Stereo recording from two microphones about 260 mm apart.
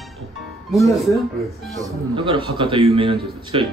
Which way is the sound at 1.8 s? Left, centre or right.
Centre.